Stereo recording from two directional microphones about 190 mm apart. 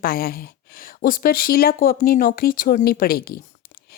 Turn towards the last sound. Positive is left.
turn(degrees=50)  # may be behind; listen again after turning